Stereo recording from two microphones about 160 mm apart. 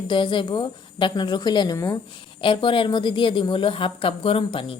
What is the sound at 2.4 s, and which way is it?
A woman's voice, 30° left (ahead or behind).